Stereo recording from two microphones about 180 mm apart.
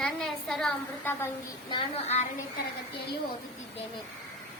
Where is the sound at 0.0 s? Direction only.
5° left (ahead or behind).